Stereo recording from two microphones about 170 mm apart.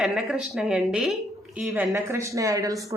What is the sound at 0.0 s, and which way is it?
Speech, centre (ahead or behind).